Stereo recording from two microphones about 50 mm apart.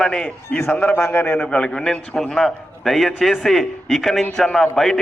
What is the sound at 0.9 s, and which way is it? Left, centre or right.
Speech, left.